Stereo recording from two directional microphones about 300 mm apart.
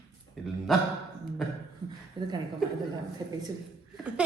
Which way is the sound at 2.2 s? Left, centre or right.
Centre.